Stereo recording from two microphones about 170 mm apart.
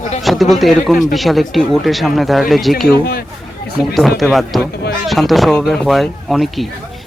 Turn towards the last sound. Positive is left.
turn(degrees=0)  # may be behind; listen again after turning